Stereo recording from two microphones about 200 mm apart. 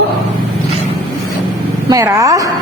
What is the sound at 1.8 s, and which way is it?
Speech, 15° right (ahead or behind).